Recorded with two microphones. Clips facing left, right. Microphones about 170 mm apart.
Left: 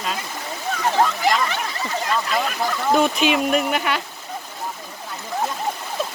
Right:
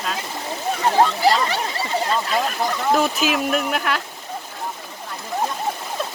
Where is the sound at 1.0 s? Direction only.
35° right (ahead or behind).